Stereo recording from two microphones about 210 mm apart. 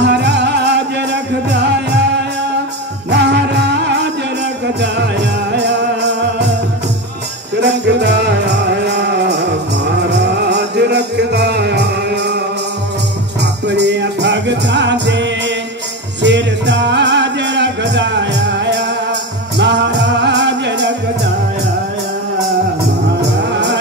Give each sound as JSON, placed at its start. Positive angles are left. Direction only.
{"t": 0.0, "sound": "music", "side_deg": -55}
{"t": 3.1, "sound": "music", "side_deg": -55}
{"t": 7.6, "sound": "music", "side_deg": -55}
{"t": 10.1, "sound": "music", "side_deg": -55}
{"t": 13.4, "sound": "music", "side_deg": -55}
{"t": 23.5, "sound": "music", "side_deg": -55}